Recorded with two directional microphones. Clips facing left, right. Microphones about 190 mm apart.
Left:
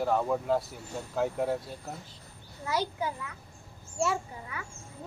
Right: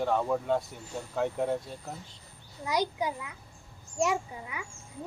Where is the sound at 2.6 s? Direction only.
15° right (ahead or behind).